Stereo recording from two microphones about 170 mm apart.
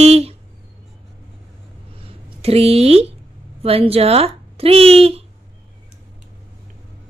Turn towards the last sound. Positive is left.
turn(degrees=-35)  # may be behind; listen again after turning